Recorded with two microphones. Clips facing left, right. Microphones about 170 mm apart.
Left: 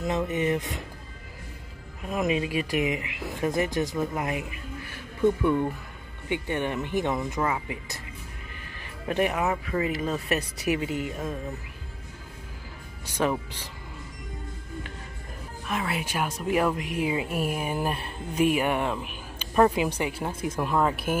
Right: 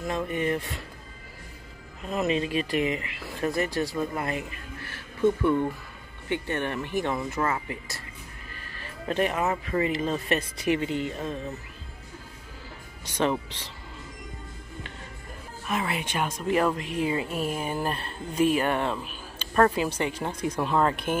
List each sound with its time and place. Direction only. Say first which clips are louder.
0.0 s speech: left 2 dB; 20° left (ahead or behind)
2.0 s speech: even; 10° left (ahead or behind)
13.0 s speech: even; 10° left (ahead or behind)
15.6 s speech: right 1 dB; centre (ahead or behind)